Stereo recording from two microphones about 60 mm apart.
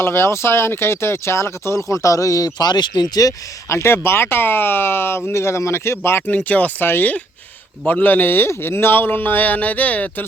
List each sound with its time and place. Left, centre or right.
0.0 s speech: left
3.7 s speech: left
6.2 s speech: left
6.8 s speech: left